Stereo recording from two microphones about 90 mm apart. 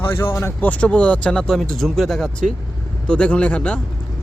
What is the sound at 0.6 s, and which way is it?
Speech, 15° left (ahead or behind).